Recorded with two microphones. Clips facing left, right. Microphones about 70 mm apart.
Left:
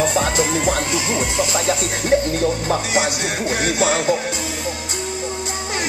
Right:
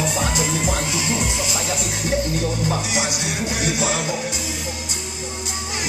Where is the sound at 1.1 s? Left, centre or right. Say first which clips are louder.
Left 4 dB; left.